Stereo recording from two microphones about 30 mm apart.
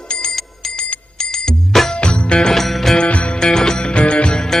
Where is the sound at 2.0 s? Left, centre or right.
Left.